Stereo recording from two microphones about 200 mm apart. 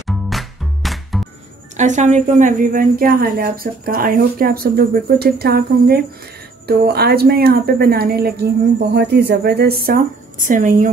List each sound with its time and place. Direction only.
0.0 s music: centre (ahead or behind)
1.8 s a woman's voice: 35° right (ahead or behind)